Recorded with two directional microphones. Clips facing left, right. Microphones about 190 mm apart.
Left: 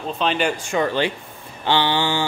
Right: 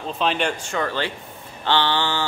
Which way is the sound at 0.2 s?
Centre (ahead or behind).